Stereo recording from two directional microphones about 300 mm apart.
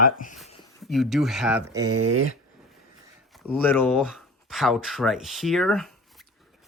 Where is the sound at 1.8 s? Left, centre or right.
Right.